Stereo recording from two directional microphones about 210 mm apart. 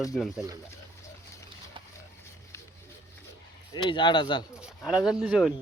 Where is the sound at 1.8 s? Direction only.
25° right (ahead or behind).